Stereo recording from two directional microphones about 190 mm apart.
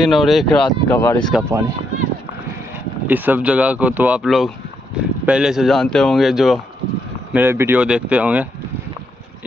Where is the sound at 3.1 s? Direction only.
10° right (ahead or behind).